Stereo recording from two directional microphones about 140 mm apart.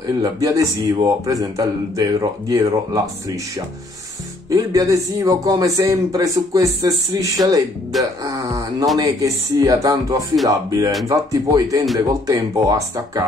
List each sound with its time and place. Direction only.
0.0 s a man's voice: 25° right (ahead or behind)